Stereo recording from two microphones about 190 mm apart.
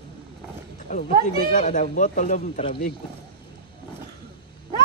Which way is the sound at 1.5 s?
45° left (ahead or behind).